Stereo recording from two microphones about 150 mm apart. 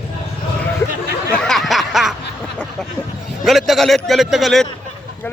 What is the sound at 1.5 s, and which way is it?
Snicker, centre (ahead or behind).